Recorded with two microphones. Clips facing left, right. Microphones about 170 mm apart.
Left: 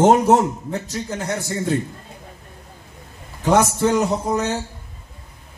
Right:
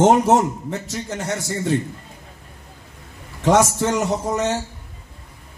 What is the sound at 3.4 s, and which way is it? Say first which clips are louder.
A man's voice: even; 75° right (ahead or behind).